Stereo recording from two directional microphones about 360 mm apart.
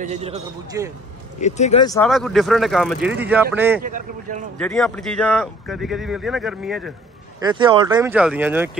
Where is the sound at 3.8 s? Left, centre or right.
Right.